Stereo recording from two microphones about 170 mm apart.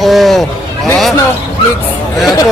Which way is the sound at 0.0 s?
Centre (ahead or behind).